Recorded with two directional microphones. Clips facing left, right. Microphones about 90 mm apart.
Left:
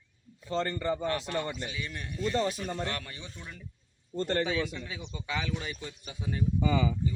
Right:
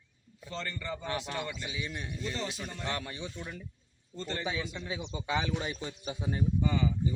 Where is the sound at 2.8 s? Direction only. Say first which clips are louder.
Even; 20° right (ahead or behind).